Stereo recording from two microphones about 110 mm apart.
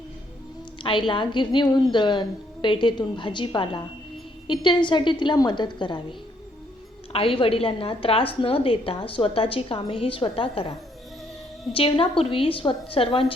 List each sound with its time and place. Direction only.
0.8 s a woman's voice: 50° left (ahead or behind)
7.1 s a woman's voice: 55° left (ahead or behind)